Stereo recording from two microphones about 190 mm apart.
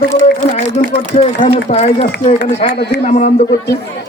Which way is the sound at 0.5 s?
35° left (ahead or behind).